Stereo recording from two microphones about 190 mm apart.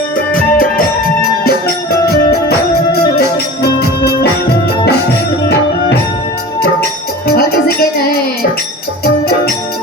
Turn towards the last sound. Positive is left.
turn(degrees=55)  # may be behind; listen again after turning